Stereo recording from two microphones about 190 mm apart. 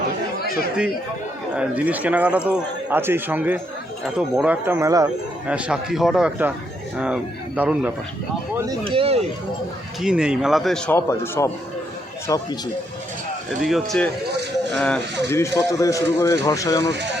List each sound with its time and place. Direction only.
1.5 s speech: 10° right (ahead or behind)
5.5 s a man's voice: 5° right (ahead or behind)
8.8 s speech: 30° right (ahead or behind)
10.0 s a man's voice: 5° right (ahead or behind); by 12.4 s 20° left (ahead or behind)
13.6 s a man's voice: centre (ahead or behind); by 16.9 s 15° left (ahead or behind)